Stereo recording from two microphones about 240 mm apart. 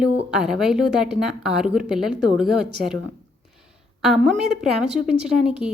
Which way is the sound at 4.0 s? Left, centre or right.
Centre.